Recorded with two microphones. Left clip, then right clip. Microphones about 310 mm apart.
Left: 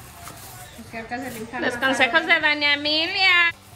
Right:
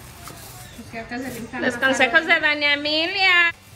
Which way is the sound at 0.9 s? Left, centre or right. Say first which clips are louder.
Even; left.